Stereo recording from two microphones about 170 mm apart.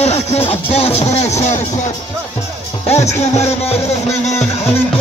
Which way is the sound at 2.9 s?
40° left (ahead or behind).